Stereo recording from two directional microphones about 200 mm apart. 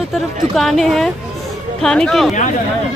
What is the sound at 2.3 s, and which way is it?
Speech, 40° left (ahead or behind).